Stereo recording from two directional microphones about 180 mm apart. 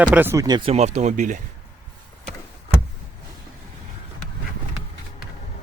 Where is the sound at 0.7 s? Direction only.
40° right (ahead or behind).